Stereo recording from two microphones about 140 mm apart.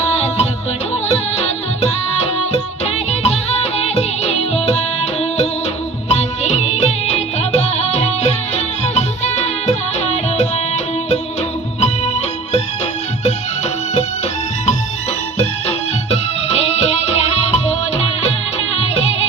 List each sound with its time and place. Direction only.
0.0 s music: 50° left (ahead or behind)
6.1 s music: 50° left (ahead or behind)
15.6 s music: 50° left (ahead or behind)